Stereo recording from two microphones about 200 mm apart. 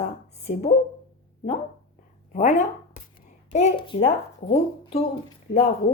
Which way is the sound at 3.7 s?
25° left (ahead or behind).